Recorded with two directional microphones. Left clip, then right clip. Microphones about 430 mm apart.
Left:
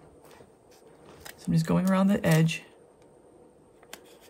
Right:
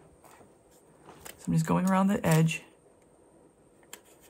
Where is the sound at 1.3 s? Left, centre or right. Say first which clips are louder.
Left 1 dB; centre.